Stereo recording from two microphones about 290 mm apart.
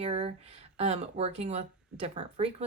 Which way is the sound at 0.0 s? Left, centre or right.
Right.